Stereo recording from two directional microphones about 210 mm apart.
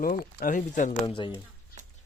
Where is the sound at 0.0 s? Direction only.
40° left (ahead or behind).